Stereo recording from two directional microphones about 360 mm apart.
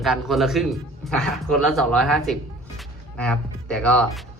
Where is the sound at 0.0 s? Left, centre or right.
Centre.